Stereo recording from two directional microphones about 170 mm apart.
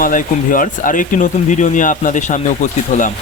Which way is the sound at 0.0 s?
55° left (ahead or behind).